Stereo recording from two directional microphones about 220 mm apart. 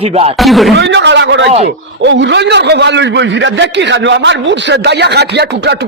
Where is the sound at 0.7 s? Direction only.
50° right (ahead or behind).